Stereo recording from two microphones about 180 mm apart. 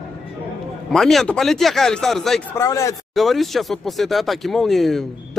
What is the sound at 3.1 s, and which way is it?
Speech, centre (ahead or behind).